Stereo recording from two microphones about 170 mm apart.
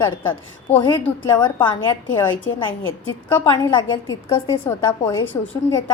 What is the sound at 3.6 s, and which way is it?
A woman's voice, 25° left (ahead or behind).